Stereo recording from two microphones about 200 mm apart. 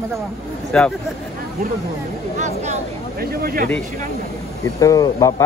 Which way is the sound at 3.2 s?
50° right (ahead or behind).